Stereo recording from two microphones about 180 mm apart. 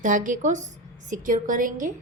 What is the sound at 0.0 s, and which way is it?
A woman's voice, 45° right (ahead or behind).